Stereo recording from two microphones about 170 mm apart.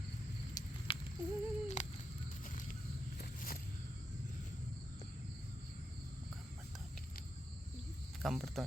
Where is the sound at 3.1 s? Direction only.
60° left (ahead or behind).